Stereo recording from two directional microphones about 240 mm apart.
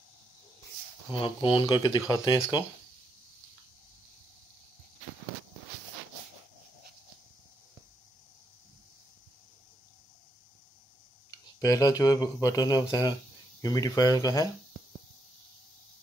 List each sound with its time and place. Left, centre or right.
1.1 s speech: left
11.6 s speech: centre